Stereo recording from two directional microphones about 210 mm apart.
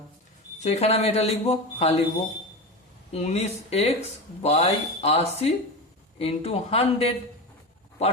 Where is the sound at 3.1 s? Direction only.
30° left (ahead or behind).